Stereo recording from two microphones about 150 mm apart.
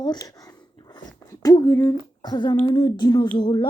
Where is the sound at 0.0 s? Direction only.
25° left (ahead or behind).